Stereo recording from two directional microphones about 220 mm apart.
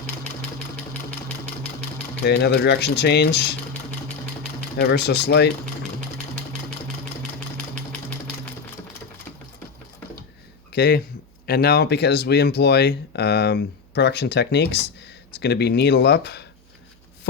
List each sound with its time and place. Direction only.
2.2 s speech: 50° left (ahead or behind)
4.8 s speech: 50° left (ahead or behind)
7.3 s sewing machine: 5° left (ahead or behind)
10.7 s speech: 45° left (ahead or behind)